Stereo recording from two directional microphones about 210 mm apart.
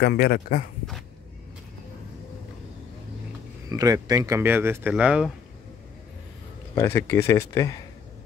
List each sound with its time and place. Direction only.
0.0 s speech: 45° left (ahead or behind)
3.6 s speech: 15° right (ahead or behind)
6.7 s speech: 15° left (ahead or behind)